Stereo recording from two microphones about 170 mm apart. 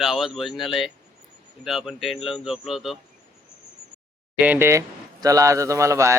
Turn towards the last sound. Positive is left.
turn(degrees=-15)  # may be behind; listen again after turning